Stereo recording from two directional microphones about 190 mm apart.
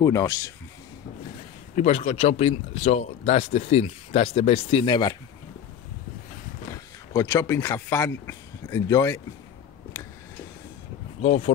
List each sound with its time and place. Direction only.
0.0 s speech: 15° left (ahead or behind)
1.8 s speech: 35° left (ahead or behind)
6.7 s speech: 15° left (ahead or behind)
11.1 s speech: 35° left (ahead or behind)